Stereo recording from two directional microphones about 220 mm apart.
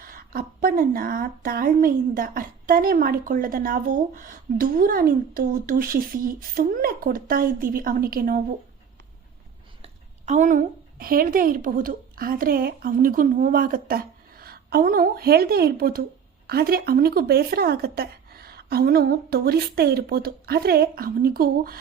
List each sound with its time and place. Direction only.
0.0 s a woman's voice: 40° right (ahead or behind)
9.8 s a woman's voice: 30° right (ahead or behind)